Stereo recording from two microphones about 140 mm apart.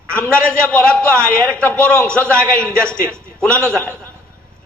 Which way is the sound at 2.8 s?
20° right (ahead or behind).